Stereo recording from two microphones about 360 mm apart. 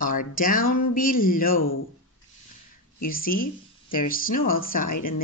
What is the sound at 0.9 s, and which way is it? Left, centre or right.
Speech, left.